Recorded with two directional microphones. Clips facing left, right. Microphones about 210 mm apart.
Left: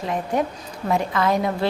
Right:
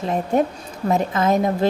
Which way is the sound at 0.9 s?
20° right (ahead or behind).